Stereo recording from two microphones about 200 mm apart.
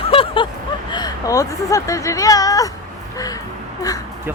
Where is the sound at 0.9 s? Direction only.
20° left (ahead or behind).